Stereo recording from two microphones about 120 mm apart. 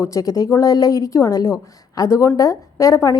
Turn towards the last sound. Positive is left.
turn(degrees=30)  # may be behind; listen again after turning